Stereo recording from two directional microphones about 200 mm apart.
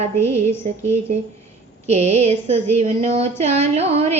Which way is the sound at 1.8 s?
30° right (ahead or behind).